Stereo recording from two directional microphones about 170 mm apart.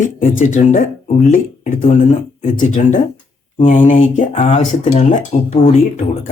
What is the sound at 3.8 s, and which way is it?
Speech, 35° left (ahead or behind).